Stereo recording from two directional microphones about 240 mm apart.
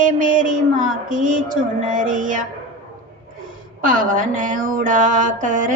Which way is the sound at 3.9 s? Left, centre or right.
Right.